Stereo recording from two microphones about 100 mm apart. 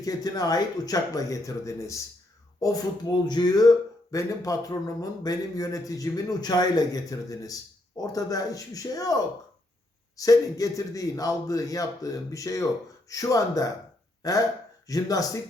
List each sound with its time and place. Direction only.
0.0 s speech: 40° left (ahead or behind)